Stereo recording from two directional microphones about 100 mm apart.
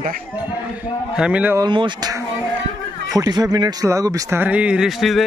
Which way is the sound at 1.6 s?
55° right (ahead or behind).